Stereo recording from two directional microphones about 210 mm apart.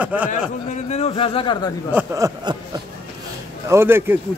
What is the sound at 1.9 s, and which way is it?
Speech, 10° right (ahead or behind).